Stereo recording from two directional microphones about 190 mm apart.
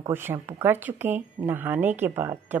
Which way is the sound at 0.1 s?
10° right (ahead or behind).